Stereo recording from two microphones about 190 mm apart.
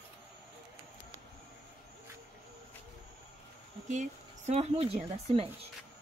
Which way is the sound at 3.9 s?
40° right (ahead or behind).